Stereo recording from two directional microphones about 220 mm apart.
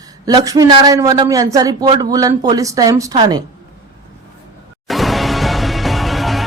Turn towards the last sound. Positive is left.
turn(degrees=0)  # may be behind; listen again after turning